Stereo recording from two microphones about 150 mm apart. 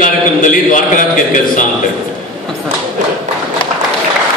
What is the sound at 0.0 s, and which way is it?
A man's voice, 60° left (ahead or behind).